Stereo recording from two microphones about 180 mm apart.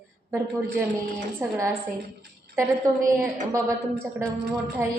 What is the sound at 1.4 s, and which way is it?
Speech, 15° right (ahead or behind).